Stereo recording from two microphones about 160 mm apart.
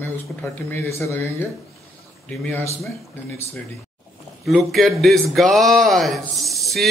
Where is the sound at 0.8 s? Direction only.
15° left (ahead or behind).